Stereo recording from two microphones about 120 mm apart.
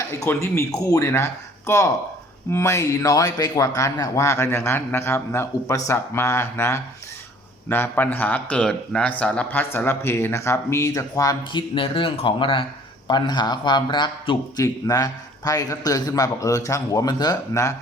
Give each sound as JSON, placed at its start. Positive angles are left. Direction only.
{"t": 0.3, "sound": "a man's voice", "side_deg": 20}
{"t": 11.5, "sound": "a man's voice", "side_deg": 45}